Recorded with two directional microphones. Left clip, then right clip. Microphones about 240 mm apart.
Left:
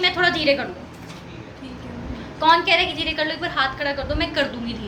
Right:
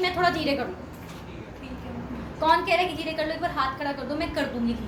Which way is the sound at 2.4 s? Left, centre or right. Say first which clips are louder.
Left 5 dB; centre.